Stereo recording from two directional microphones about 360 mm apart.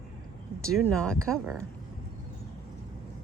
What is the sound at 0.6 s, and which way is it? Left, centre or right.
Speech, centre.